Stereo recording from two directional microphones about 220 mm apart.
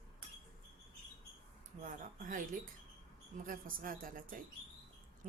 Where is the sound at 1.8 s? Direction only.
35° right (ahead or behind).